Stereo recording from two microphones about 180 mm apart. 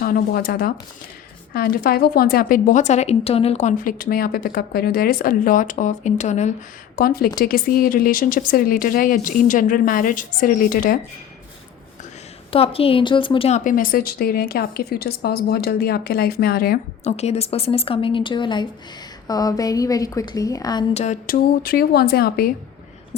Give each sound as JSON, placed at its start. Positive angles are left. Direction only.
{"t": 0.0, "sound": "a woman's voice", "side_deg": 55}
{"t": 6.9, "sound": "a woman's voice", "side_deg": 55}
{"t": 12.5, "sound": "a woman's voice", "side_deg": 30}
{"t": 13.7, "sound": "speech", "side_deg": 50}
{"t": 17.0, "sound": "a woman's voice", "side_deg": 35}
{"t": 20.9, "sound": "speech", "side_deg": 40}